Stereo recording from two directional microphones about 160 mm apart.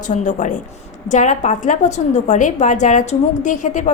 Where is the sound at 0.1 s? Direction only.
50° left (ahead or behind).